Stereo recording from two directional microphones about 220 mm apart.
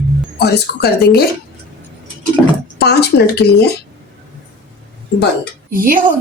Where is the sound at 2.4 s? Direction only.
5° right (ahead or behind).